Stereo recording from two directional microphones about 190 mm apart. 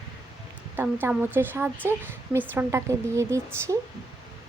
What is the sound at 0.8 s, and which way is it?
Speech, 10° right (ahead or behind).